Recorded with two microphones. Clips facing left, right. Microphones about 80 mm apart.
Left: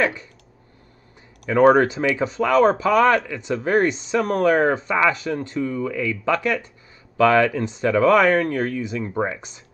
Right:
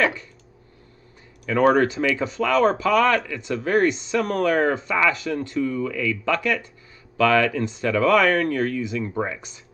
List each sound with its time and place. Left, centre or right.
1.6 s speech: left
2.0 s speech: left
2.5 s speech: left
3.3 s speech: left
3.7 s speech: left
4.8 s speech: left
6.3 s speech: left
7.2 s speech: left
8.0 s speech: left
8.5 s speech: left